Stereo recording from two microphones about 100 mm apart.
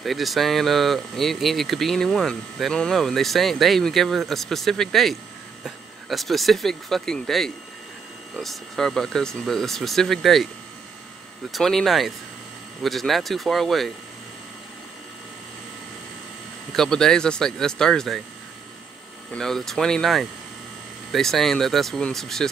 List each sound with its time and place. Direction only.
0.0 s speech: centre (ahead or behind)
11.5 s speech: 5° left (ahead or behind)
16.7 s speech: 5° left (ahead or behind)
19.3 s speech: 5° left (ahead or behind)